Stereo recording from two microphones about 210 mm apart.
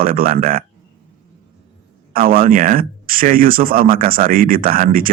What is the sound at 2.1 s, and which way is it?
Speech, 45° right (ahead or behind).